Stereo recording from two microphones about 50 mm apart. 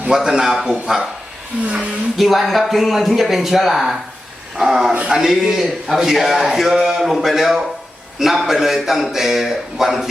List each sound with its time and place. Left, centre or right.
0.1 s a man's voice: centre
1.6 s speech: right
2.1 s a man's voice: centre